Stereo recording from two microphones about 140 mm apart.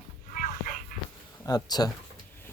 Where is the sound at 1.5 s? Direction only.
30° left (ahead or behind).